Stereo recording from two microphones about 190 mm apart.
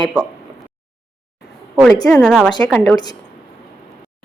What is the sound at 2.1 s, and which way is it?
Female singing, 5° left (ahead or behind).